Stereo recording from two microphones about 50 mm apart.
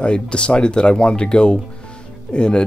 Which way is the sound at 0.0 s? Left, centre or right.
Left.